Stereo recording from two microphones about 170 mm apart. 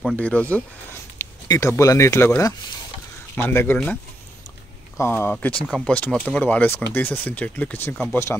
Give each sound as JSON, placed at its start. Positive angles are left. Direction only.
{"t": 0.0, "sound": "speech", "side_deg": 10}